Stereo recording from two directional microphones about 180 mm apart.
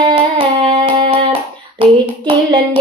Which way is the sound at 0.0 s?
30° right (ahead or behind).